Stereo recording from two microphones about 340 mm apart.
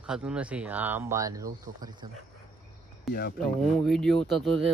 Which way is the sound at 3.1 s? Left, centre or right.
Left.